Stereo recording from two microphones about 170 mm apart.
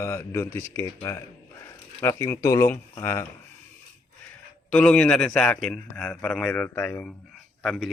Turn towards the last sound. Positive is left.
turn(degrees=0)  # may be behind; listen again after turning